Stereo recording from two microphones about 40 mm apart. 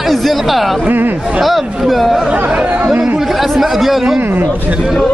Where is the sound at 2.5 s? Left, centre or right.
Right.